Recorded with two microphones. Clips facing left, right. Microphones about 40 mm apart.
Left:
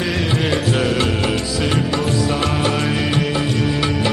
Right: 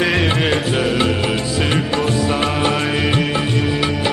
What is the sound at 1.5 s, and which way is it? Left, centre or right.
Music, right.